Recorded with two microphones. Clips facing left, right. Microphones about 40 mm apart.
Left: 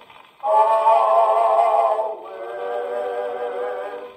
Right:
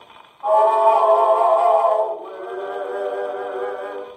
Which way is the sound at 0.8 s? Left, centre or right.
Left.